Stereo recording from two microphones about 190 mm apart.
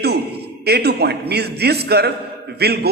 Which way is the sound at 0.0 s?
60° right (ahead or behind).